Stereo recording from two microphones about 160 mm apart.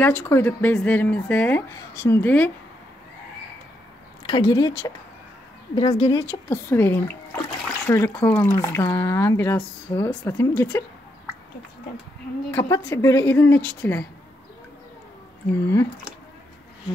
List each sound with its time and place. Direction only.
0.0 s speech: 10° left (ahead or behind)
4.3 s speech: 25° left (ahead or behind)
6.5 s speech: 15° left (ahead or behind)
12.4 s speech: 15° left (ahead or behind)
15.7 s speech: 15° left (ahead or behind)